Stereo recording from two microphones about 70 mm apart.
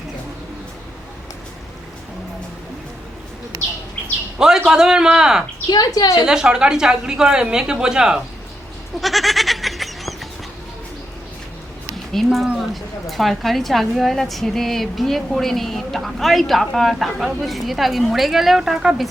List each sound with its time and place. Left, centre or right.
4.4 s a woman's voice: centre
5.6 s a woman's voice: left
6.1 s a woman's voice: centre
9.0 s goat: centre
12.1 s a woman's voice: centre